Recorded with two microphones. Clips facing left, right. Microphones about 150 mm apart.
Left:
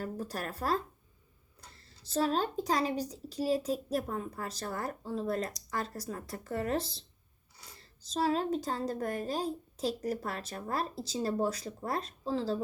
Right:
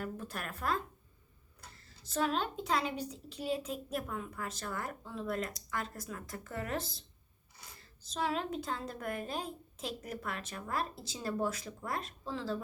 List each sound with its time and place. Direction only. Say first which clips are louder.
0.0 s a woman's voice: left 4 dB; 35° left (ahead or behind)
2.0 s a woman's voice: left 3 dB; 30° left (ahead or behind)